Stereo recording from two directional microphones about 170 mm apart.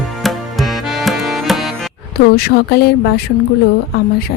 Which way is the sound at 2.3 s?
70° left (ahead or behind).